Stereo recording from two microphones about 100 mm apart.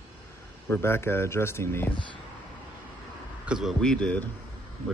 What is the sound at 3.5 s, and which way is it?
Speech, 5° right (ahead or behind).